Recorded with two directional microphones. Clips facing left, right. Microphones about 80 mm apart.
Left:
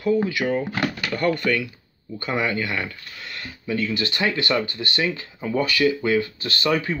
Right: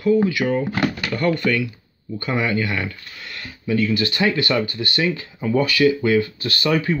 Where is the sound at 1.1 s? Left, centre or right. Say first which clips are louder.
Even; centre.